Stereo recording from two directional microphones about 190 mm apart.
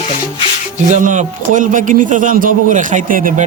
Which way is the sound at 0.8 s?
40° right (ahead or behind).